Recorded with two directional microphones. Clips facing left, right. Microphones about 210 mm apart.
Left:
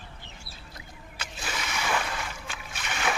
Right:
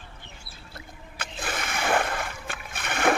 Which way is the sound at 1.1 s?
55° right (ahead or behind).